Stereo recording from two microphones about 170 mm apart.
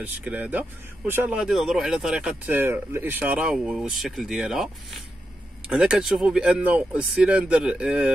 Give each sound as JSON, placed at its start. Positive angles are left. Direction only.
{"t": 0.0, "sound": "speech", "side_deg": -10}